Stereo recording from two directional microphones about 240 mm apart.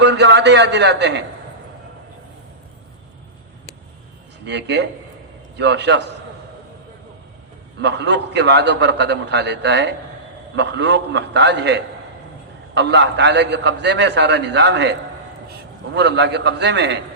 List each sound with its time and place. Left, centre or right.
0.0 s a man's voice: right
4.4 s a man's voice: right
7.8 s a man's voice: right
16.0 s a man's voice: right